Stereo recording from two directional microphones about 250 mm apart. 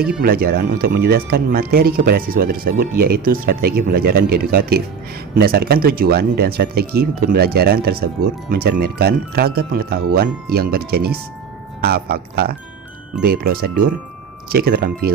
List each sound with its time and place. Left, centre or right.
0.2 s speech: right